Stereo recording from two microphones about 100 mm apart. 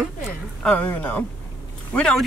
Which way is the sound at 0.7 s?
20° left (ahead or behind).